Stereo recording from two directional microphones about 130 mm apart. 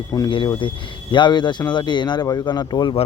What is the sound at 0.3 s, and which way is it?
Speech, 40° left (ahead or behind).